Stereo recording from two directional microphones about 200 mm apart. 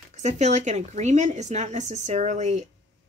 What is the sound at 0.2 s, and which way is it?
Speech, 35° right (ahead or behind).